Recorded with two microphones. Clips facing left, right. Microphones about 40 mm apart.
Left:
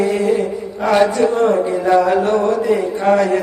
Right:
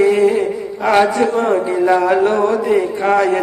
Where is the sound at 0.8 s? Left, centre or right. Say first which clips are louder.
Even; right.